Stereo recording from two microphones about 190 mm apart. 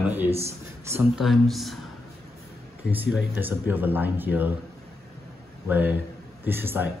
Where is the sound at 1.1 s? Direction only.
Centre (ahead or behind).